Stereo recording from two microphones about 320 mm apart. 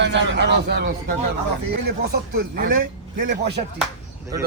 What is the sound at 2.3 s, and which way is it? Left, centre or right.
A man's voice, right.